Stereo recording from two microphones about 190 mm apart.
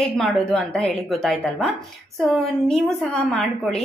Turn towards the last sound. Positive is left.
turn(degrees=0)  # may be behind; listen again after turning